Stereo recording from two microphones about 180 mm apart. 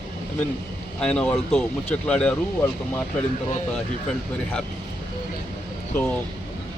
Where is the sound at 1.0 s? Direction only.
5° left (ahead or behind).